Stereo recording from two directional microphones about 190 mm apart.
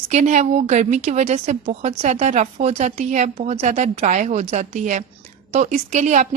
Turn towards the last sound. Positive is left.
turn(degrees=-40)  # may be behind; listen again after turning